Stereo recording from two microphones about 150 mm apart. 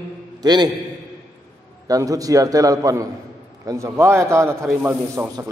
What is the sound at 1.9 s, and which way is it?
A man's voice, 25° right (ahead or behind).